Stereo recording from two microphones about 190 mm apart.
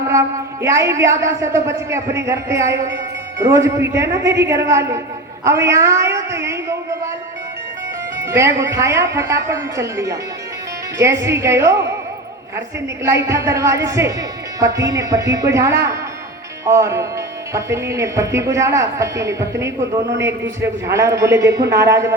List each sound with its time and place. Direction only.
0.1 s a woman's voice: 15° right (ahead or behind)
8.2 s speech: 15° right (ahead or behind)
13.0 s speech: 15° right (ahead or behind)